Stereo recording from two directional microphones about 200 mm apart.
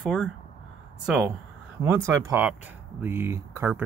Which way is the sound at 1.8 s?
15° right (ahead or behind).